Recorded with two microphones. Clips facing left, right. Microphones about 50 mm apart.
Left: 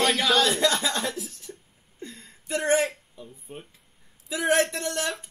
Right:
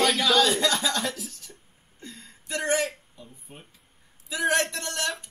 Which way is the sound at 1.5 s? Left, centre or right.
Centre.